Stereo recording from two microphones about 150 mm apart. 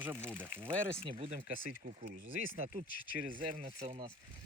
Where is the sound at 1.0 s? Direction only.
45° right (ahead or behind).